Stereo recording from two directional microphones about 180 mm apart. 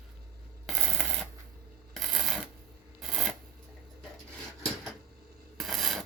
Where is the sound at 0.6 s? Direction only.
Centre (ahead or behind).